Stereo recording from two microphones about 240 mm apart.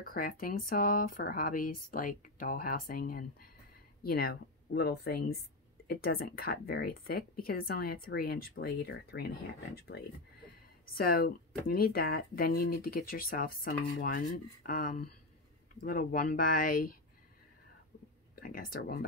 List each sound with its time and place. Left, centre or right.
0.0 s speech: left
18.3 s speech: left